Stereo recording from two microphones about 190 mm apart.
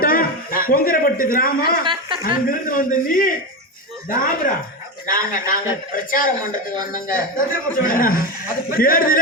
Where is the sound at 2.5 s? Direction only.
45° left (ahead or behind).